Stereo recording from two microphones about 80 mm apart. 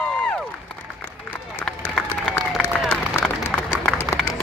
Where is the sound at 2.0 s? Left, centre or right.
Centre.